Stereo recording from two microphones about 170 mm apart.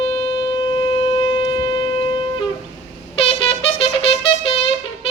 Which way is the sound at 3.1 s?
35° left (ahead or behind).